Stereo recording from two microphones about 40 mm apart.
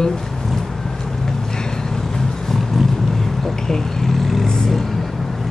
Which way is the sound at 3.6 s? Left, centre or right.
Centre.